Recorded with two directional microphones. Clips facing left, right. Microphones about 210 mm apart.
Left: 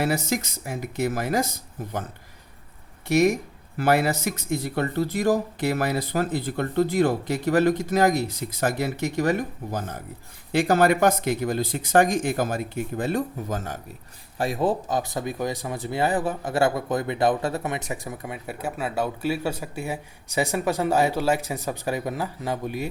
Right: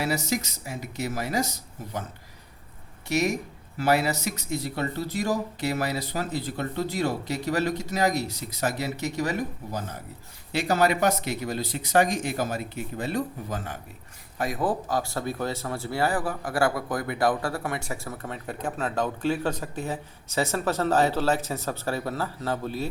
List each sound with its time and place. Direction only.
0.0 s speech: 55° left (ahead or behind)
3.1 s speech: 50° left (ahead or behind)
14.3 s speech: 30° left (ahead or behind)